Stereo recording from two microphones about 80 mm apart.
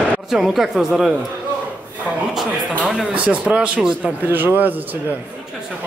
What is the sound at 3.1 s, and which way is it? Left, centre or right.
Speech, centre.